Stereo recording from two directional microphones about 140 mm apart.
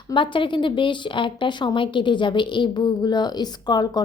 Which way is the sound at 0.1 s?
35° left (ahead or behind).